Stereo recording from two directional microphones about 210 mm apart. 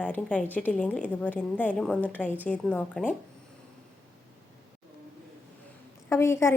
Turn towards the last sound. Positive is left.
turn(degrees=10)  # may be behind; listen again after turning